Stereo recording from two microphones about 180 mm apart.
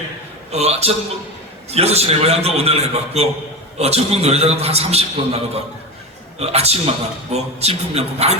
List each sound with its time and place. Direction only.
0.5 s a man's voice: 35° right (ahead or behind)